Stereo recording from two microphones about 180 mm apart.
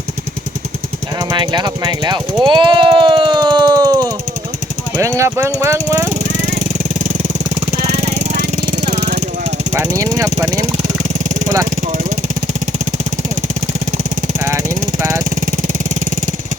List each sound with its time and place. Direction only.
1.2 s speech: 25° right (ahead or behind)
2.5 s a sound: 25° right (ahead or behind)
4.9 s jackhammer: 15° right (ahead or behind)
7.9 s vehicle: 40° right (ahead or behind)
9.7 s speech: 15° right (ahead or behind)
10.8 s vehicle: 45° right (ahead or behind)